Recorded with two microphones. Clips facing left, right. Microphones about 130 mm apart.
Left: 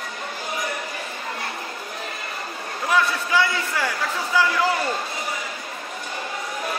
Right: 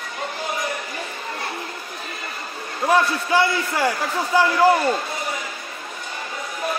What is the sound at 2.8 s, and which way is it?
A man's voice, 35° right (ahead or behind).